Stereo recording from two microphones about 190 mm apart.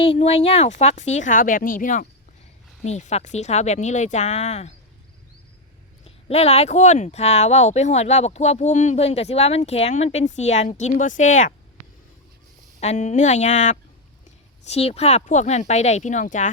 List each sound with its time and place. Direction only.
0.0 s speech: 30° left (ahead or behind)
6.1 s speech: 30° left (ahead or behind)
12.8 s speech: 35° left (ahead or behind)